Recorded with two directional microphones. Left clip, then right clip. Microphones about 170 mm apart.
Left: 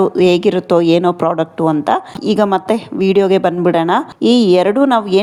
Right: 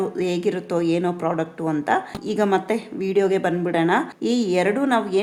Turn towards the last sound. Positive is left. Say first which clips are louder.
# left 8 dB
turn(degrees=40)  # may be behind; listen again after turning